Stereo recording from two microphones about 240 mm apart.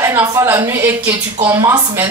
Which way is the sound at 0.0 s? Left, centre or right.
Centre.